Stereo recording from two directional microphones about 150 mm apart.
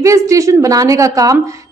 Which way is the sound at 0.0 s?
20° right (ahead or behind).